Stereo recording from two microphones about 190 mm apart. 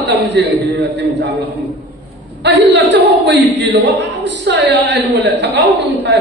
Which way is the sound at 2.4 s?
70° right (ahead or behind).